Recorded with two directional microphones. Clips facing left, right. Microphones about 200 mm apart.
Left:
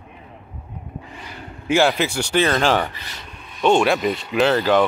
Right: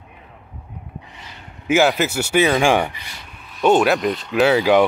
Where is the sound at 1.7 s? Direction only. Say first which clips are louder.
Right 1 dB; 5° right (ahead or behind).